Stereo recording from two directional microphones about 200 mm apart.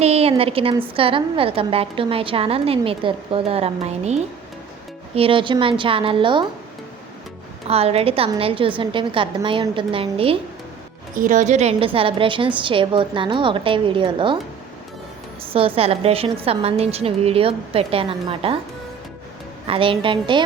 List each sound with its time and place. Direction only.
0.0 s a woman's voice: 30° right (ahead or behind)
7.7 s a woman's voice: 30° right (ahead or behind)
11.1 s a woman's voice: 40° right (ahead or behind); by 14.3 s 25° right (ahead or behind)
15.4 s a woman's voice: 30° right (ahead or behind)
19.6 s a woman's voice: 25° right (ahead or behind)